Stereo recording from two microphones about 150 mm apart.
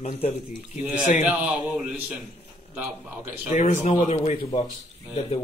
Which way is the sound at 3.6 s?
50° left (ahead or behind).